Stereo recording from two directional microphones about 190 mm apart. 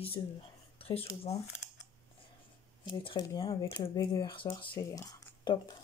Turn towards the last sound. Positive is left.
turn(degrees=20)  # may be behind; listen again after turning